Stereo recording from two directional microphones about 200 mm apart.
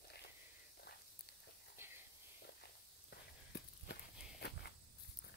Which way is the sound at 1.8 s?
10° right (ahead or behind).